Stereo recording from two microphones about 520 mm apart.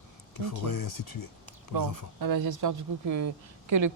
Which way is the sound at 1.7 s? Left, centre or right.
Right.